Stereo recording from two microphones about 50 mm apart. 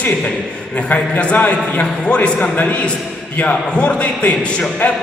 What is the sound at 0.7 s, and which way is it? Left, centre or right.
A man's voice, left.